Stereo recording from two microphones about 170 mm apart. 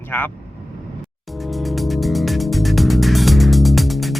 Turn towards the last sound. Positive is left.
turn(degrees=0)  # may be behind; listen again after turning